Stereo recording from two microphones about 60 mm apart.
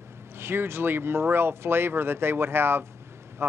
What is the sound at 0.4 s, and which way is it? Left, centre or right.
Speech, right.